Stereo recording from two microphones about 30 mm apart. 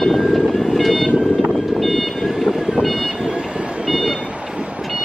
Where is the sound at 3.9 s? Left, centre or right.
Centre.